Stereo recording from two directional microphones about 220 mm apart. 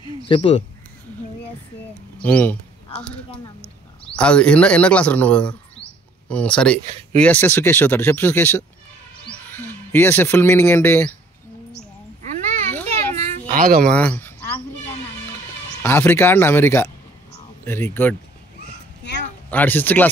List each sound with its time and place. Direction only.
0.3 s speech: 25° left (ahead or behind)
2.2 s speech: 5° left (ahead or behind)
12.3 s children playing: 35° right (ahead or behind)
12.9 s a sound: 30° right (ahead or behind)
13.8 s a sound: 5° left (ahead or behind)
15.8 s speech: 10° left (ahead or behind)
19.5 s speech: 10° left (ahead or behind)